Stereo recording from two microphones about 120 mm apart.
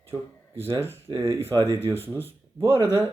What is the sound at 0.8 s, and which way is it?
Speech, 20° right (ahead or behind).